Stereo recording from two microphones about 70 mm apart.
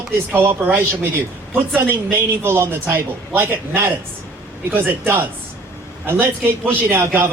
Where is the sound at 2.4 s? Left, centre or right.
Right.